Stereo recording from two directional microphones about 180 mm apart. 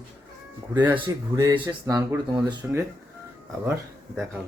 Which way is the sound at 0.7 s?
10° right (ahead or behind).